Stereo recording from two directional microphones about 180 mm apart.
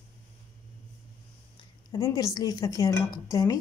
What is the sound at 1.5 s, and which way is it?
Speech, 20° left (ahead or behind).